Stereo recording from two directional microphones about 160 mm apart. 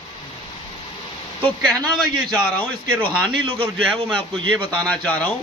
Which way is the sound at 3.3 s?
35° right (ahead or behind).